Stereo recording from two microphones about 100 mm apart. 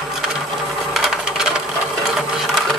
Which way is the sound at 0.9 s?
5° right (ahead or behind).